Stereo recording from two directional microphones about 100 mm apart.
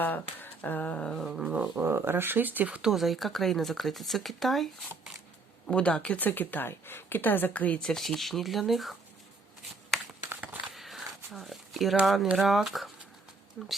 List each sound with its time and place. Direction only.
0.0 s speech: 20° left (ahead or behind)
1.3 s speech: 10° right (ahead or behind)
2.9 s speech: centre (ahead or behind)
10.2 s a sound: 20° right (ahead or behind)
10.8 s a sound: centre (ahead or behind)
12.4 s speech: centre (ahead or behind)